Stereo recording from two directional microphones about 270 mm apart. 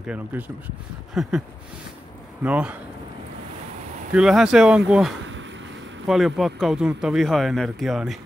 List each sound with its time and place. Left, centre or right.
0.0 s speech: centre
2.4 s speech: centre
4.1 s speech: centre